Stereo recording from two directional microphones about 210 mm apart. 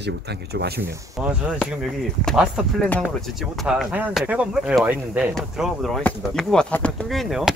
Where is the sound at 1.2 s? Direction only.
Centre (ahead or behind).